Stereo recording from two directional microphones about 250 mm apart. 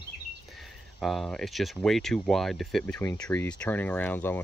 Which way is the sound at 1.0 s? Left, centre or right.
Centre.